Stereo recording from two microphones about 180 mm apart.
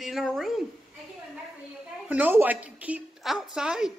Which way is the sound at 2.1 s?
10° right (ahead or behind).